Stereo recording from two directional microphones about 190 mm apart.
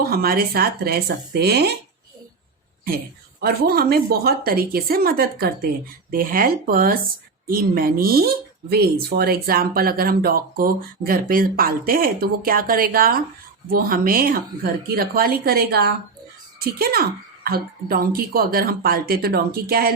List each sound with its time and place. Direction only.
0.0 s speech: 50° right (ahead or behind)
3.4 s speech: 55° right (ahead or behind)